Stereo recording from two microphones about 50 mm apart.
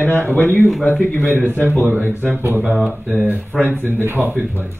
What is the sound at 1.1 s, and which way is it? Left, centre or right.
Speech, left.